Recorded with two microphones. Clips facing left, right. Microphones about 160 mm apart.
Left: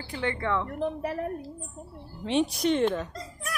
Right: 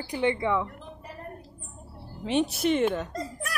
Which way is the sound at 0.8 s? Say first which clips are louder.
Left 13 dB; 70° left (ahead or behind).